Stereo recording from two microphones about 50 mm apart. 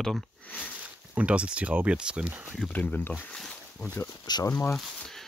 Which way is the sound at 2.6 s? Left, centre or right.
Left.